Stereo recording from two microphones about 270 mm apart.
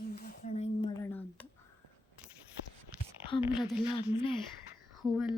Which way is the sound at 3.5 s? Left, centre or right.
Centre.